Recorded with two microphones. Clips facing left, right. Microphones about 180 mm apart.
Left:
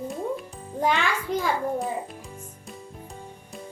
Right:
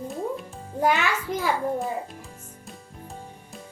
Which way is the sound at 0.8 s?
10° right (ahead or behind).